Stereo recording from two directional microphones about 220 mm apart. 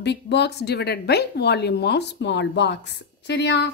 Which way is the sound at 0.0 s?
50° left (ahead or behind).